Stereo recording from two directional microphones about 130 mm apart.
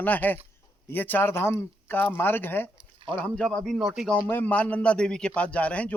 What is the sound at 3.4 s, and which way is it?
Speech, 5° left (ahead or behind).